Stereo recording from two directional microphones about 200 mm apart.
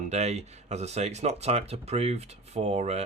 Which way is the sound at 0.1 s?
35° right (ahead or behind).